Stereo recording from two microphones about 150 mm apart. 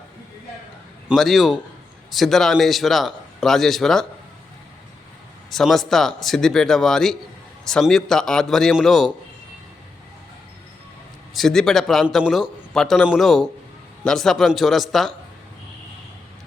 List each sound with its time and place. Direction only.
1.0 s a man's voice: centre (ahead or behind)
5.5 s a man's voice: centre (ahead or behind)
11.3 s a man's voice: centre (ahead or behind)